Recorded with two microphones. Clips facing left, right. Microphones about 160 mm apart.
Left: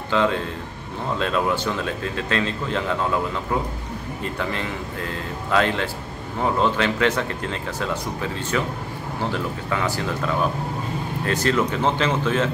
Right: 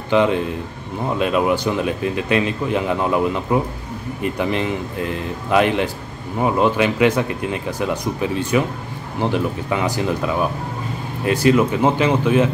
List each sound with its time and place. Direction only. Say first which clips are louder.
0.1 s speech: right 5 dB; 15° right (ahead or behind)